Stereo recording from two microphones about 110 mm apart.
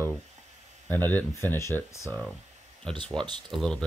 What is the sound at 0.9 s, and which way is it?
Speech, 15° left (ahead or behind).